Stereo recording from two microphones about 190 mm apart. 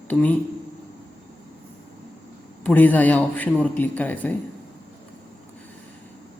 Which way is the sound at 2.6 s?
10° left (ahead or behind).